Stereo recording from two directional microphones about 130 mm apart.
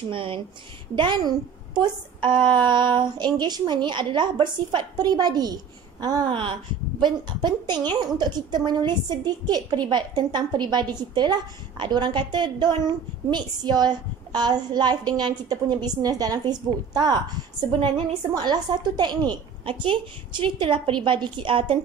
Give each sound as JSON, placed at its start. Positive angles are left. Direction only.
{"t": 0.1, "sound": "a woman's voice", "side_deg": -40}